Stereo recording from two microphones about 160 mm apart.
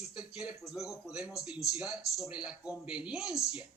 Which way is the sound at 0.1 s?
5° right (ahead or behind).